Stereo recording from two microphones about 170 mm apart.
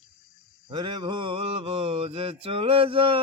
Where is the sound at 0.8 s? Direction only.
25° right (ahead or behind).